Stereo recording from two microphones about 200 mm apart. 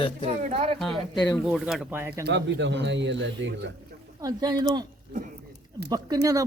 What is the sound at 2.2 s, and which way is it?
Speech, 60° right (ahead or behind).